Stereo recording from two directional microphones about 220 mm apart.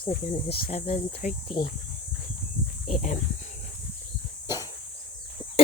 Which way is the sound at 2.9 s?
30° left (ahead or behind).